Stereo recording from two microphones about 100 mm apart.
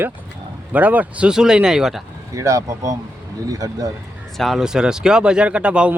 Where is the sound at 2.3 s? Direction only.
30° right (ahead or behind).